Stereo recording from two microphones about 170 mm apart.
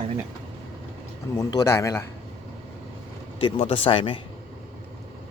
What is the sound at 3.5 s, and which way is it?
Speech, 35° left (ahead or behind).